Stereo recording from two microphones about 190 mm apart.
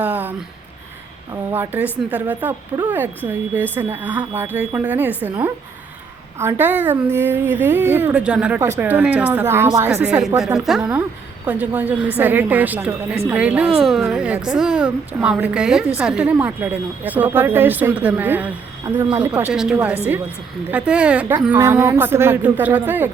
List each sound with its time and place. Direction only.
0.0 s a sound: 10° right (ahead or behind)
1.5 s a woman's voice: 10° right (ahead or behind)
6.4 s a woman's voice: 10° right (ahead or behind)
18.8 s speech: 20° right (ahead or behind)
19.2 s a woman's voice: 5° right (ahead or behind)